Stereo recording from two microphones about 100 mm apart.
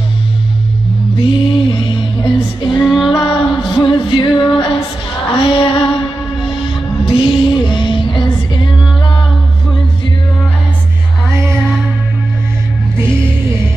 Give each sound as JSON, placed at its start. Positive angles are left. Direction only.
{"t": 1.2, "sound": "music", "side_deg": 55}
{"t": 4.6, "sound": "female singing", "side_deg": 55}
{"t": 5.3, "sound": "music", "side_deg": 60}